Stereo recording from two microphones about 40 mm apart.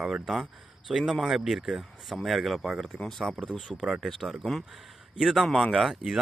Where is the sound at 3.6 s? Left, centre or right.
Centre.